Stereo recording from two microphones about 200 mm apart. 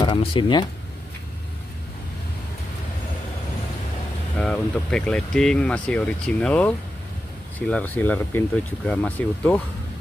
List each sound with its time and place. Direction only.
0.0 s speech: 25° left (ahead or behind)
4.4 s speech: 5° left (ahead or behind)